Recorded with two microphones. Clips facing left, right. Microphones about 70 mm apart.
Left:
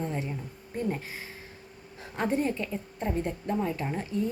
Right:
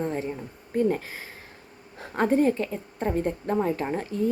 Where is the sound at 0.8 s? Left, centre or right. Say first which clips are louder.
Right 8 dB; right.